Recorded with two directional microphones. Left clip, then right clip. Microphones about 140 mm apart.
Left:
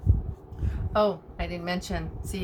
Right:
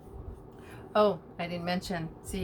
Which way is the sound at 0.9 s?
Centre (ahead or behind).